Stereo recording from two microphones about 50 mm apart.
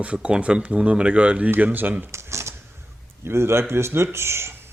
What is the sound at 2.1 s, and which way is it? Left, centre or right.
Typewriter, right.